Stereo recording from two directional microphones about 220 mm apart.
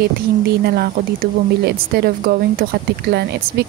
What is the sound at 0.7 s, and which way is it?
Speech, 45° right (ahead or behind).